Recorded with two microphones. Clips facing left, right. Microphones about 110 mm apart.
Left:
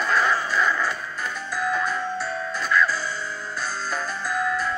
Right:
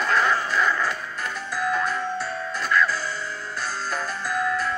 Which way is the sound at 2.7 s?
10° left (ahead or behind).